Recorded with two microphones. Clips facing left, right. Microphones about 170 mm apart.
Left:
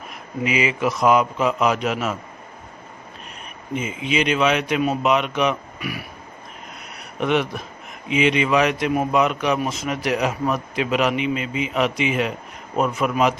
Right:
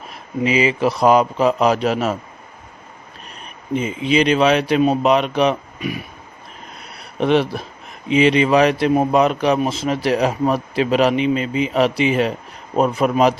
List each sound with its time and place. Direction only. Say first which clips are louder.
0.1 s a man's voice: right 5 dB; 30° right (ahead or behind)
3.8 s a man's voice: right 5 dB; 35° right (ahead or behind)
7.2 s a man's voice: right 5 dB; 30° right (ahead or behind)